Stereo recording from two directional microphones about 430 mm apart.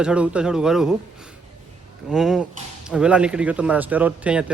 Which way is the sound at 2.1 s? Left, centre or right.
Centre.